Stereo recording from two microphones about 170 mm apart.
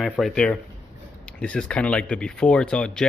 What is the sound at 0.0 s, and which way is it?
Speech, centre (ahead or behind).